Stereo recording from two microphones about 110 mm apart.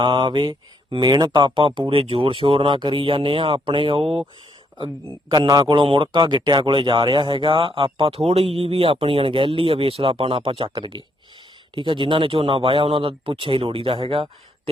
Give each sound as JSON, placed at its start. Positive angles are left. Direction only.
{"t": 0.0, "sound": "speech", "side_deg": -45}
{"t": 5.3, "sound": "a man's voice", "side_deg": -40}